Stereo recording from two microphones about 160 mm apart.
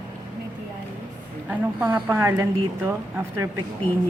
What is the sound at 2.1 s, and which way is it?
A woman's voice, 15° right (ahead or behind).